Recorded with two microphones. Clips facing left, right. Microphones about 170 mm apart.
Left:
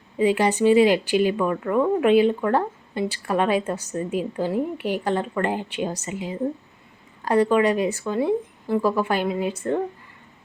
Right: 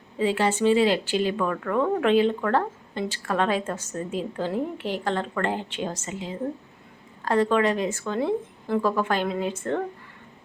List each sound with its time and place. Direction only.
0.2 s speech: 15° left (ahead or behind)